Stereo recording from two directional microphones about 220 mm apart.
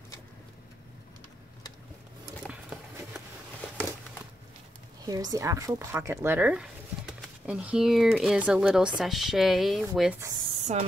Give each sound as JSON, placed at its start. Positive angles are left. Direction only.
{"t": 5.0, "sound": "speech", "side_deg": -15}
{"t": 10.5, "sound": "spray", "side_deg": -30}